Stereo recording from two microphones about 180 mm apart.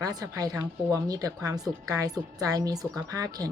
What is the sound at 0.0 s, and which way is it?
A woman's voice, 20° right (ahead or behind).